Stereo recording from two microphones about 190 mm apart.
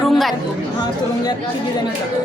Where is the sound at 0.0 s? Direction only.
Centre (ahead or behind).